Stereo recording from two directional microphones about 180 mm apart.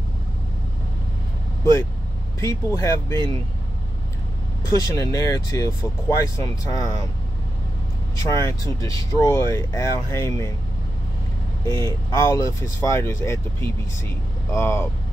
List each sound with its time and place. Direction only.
2.4 s speech: 15° left (ahead or behind)
4.6 s speech: 20° left (ahead or behind)
8.2 s speech: 20° left (ahead or behind)
11.7 s speech: 15° left (ahead or behind)